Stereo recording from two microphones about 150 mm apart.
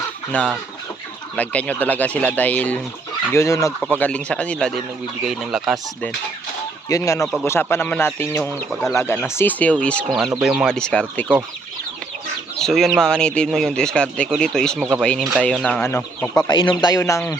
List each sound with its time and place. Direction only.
0.3 s speech: 10° left (ahead or behind)
3.3 s speech: 20° left (ahead or behind)
3.8 s speech: 10° left (ahead or behind)
6.8 s speech: 20° left (ahead or behind)
10.3 s speech: 5° right (ahead or behind)
12.5 s speech: 5° left (ahead or behind)
16.5 s speech: 30° left (ahead or behind)